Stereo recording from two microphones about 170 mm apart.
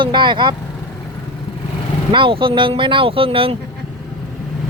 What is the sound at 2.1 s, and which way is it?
Speech, 30° right (ahead or behind).